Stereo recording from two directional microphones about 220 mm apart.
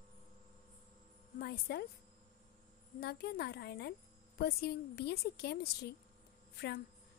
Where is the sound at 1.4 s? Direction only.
45° left (ahead or behind).